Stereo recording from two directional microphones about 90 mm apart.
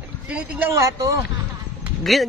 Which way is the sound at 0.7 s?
40° right (ahead or behind).